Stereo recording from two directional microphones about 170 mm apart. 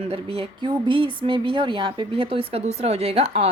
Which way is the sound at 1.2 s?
30° right (ahead or behind).